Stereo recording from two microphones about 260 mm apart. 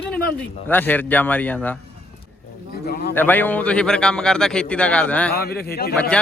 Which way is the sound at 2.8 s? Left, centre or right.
Left.